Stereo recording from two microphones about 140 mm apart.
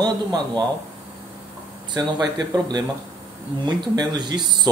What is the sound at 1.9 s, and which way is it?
Speech, 30° right (ahead or behind).